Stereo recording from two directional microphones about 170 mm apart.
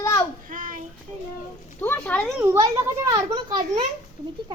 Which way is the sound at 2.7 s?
20° right (ahead or behind).